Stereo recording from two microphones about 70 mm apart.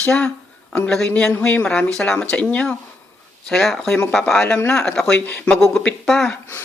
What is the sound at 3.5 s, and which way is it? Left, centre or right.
A woman's voice, centre.